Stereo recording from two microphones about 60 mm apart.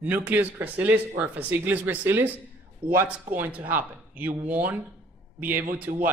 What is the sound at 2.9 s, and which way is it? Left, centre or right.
Speech, right.